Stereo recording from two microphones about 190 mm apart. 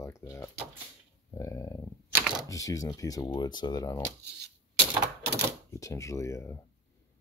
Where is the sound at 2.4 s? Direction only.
15° left (ahead or behind).